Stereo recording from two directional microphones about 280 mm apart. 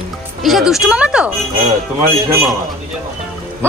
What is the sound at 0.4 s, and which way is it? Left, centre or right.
Speech, centre.